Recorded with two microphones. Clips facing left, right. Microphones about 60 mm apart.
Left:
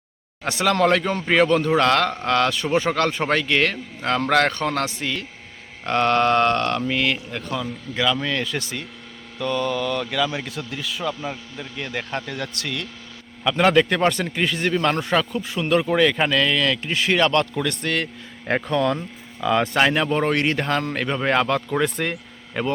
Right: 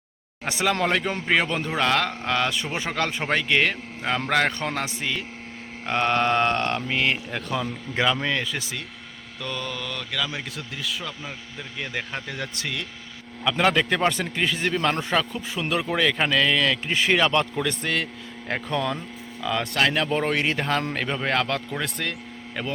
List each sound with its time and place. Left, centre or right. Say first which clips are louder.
0.4 s a man's voice: left 5 dB; centre
7.9 s speech: left 1 dB; right
8.4 s a man's voice: left 3 dB; centre
11.8 s speech: left 3 dB; centre
13.4 s a man's voice: left 4 dB; centre
19.4 s a man's voice: left 5 dB; centre
22.0 s a sound: left 4 dB; centre